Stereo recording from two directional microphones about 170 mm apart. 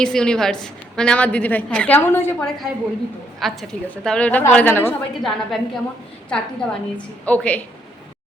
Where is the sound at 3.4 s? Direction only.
Centre (ahead or behind).